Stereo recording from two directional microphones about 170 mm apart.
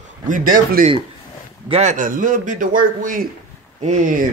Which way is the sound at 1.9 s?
50° right (ahead or behind).